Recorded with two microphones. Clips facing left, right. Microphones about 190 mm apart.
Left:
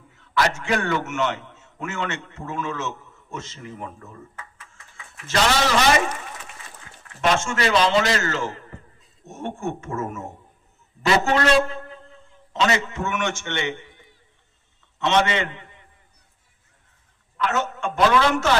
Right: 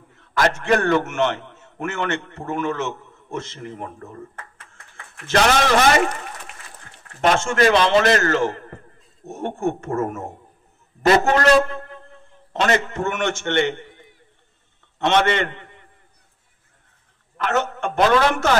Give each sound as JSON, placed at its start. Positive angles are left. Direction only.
{"t": 0.1, "sound": "a man's voice", "side_deg": -50}
{"t": 15.0, "sound": "a man's voice", "side_deg": -55}
{"t": 17.4, "sound": "a man's voice", "side_deg": -55}